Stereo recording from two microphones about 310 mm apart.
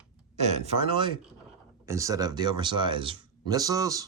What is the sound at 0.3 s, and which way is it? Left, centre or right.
Speech, right.